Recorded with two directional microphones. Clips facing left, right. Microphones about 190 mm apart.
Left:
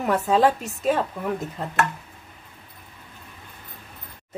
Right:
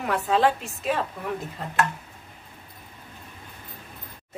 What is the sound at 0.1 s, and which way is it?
Speech, 40° left (ahead or behind).